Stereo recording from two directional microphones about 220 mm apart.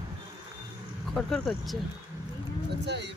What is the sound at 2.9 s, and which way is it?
Speech, 50° right (ahead or behind).